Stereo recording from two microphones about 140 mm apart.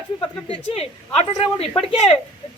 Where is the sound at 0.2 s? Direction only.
40° left (ahead or behind).